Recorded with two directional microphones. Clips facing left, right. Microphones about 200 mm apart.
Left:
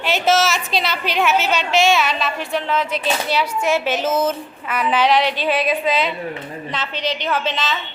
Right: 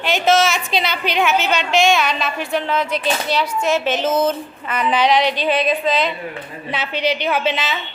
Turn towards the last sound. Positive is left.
turn(degrees=-10)  # may be behind; listen again after turning